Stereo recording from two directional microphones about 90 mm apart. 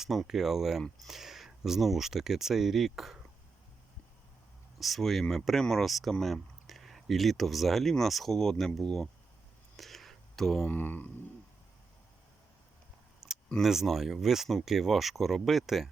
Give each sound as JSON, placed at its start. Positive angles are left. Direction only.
{"t": 0.0, "sound": "speech", "side_deg": -5}
{"t": 4.8, "sound": "speech", "side_deg": 0}
{"t": 9.7, "sound": "a sound", "side_deg": 0}
{"t": 10.7, "sound": "mantra", "side_deg": 20}
{"t": 13.2, "sound": "camera", "side_deg": -5}
{"t": 13.6, "sound": "speech", "side_deg": -5}